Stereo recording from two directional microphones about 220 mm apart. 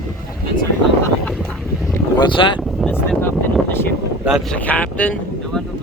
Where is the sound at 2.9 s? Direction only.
10° left (ahead or behind).